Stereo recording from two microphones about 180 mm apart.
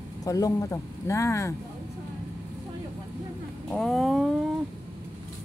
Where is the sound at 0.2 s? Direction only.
20° left (ahead or behind).